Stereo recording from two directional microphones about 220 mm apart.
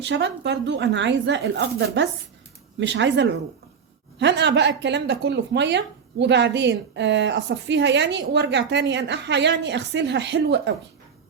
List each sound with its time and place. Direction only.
0.0 s a woman's voice: 55° right (ahead or behind)